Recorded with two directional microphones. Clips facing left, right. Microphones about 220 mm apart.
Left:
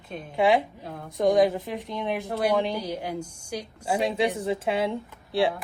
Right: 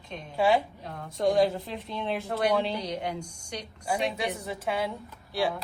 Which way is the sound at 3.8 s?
25° left (ahead or behind).